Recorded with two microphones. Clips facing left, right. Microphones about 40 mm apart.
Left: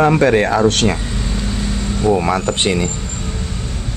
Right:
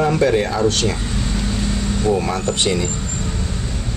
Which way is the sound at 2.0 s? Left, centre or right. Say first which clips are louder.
Left 4 dB; left.